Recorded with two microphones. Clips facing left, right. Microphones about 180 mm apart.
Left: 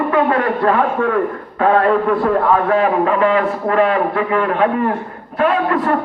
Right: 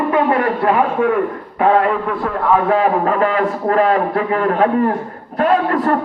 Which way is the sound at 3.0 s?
40° right (ahead or behind).